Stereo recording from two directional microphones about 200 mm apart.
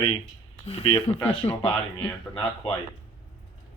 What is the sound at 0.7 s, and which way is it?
Speech, 30° left (ahead or behind).